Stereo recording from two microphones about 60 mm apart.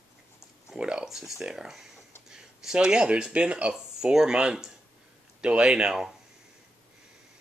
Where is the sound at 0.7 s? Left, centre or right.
Centre.